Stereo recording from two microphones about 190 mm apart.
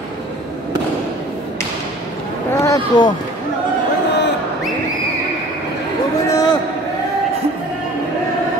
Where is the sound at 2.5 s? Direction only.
15° left (ahead or behind).